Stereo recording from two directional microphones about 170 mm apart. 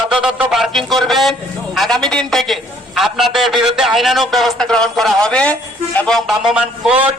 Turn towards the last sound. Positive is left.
turn(degrees=-5)  # may be behind; listen again after turning